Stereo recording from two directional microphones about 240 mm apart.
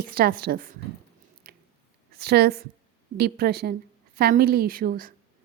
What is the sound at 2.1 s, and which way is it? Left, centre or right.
A woman's voice, right.